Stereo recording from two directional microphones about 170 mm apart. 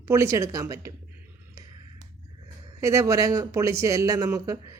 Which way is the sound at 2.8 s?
20° right (ahead or behind).